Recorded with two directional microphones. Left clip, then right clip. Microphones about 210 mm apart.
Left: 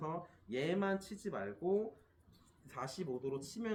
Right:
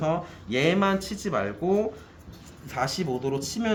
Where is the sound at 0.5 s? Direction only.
25° right (ahead or behind).